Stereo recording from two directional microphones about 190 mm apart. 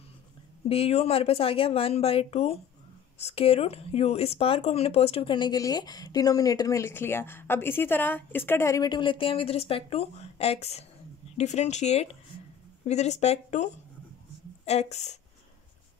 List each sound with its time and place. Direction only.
0.7 s speech: 30° left (ahead or behind)